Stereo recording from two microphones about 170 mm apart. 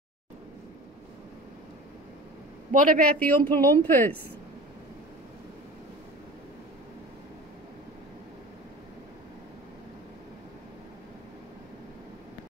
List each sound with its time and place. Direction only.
2.7 s a man's voice: 55° right (ahead or behind)
3.0 s a woman's voice: 10° left (ahead or behind)